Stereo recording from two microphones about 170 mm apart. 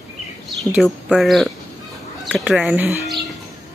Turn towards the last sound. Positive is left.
turn(degrees=-10)  # may be behind; listen again after turning